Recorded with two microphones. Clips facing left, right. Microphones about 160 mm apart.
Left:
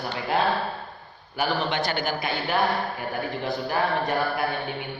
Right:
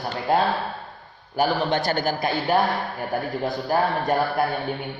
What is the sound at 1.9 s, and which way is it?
Speech, 45° right (ahead or behind).